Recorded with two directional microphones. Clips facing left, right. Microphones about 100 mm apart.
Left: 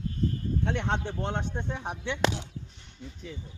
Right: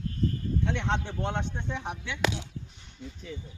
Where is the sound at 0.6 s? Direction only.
40° left (ahead or behind).